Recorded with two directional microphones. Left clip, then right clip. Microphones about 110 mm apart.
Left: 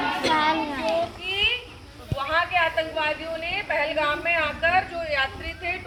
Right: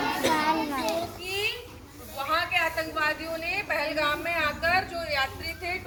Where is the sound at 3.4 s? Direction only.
Centre (ahead or behind).